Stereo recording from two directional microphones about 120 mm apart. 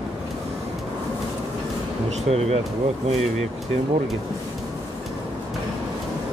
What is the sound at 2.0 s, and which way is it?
Speech, 60° right (ahead or behind).